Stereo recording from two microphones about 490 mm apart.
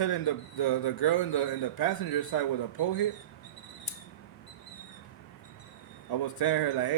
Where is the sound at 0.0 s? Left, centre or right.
Left.